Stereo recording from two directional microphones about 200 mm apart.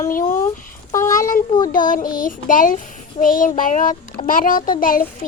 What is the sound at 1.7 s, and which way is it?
A child's voice, 45° left (ahead or behind).